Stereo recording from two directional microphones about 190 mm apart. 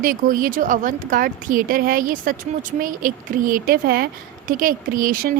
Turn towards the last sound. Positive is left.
turn(degrees=-50)  # may be behind; listen again after turning